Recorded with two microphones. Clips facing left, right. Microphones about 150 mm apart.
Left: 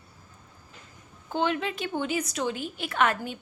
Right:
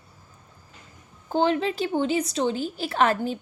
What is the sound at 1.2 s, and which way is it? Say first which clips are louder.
Speech: right 5 dB; 35° right (ahead or behind).